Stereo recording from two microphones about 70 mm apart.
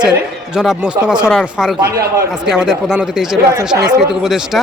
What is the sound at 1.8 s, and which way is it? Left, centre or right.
Speech, right.